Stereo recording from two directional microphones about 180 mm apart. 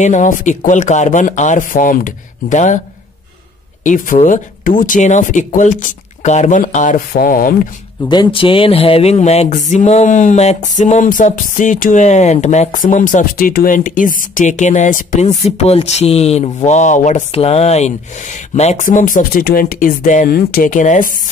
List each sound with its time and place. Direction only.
0.0 s speech: 45° left (ahead or behind)
3.8 s speech: 45° left (ahead or behind)
8.1 s a sound: 25° left (ahead or behind)
10.8 s speech: 45° left (ahead or behind)